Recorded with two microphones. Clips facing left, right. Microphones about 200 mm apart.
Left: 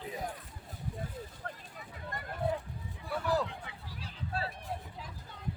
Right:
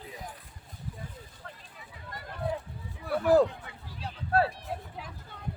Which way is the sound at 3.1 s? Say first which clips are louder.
Right 10 dB; 50° right (ahead or behind).